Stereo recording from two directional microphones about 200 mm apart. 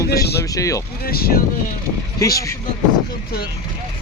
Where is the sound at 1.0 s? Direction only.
50° left (ahead or behind).